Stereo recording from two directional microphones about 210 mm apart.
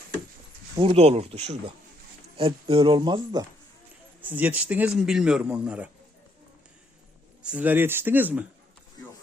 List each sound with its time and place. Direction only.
0.8 s speech: 25° right (ahead or behind)
4.2 s speech: 10° right (ahead or behind)
7.4 s speech: 5° right (ahead or behind)